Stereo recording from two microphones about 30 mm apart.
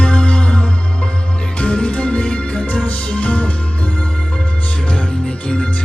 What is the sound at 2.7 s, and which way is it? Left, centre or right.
Music, left.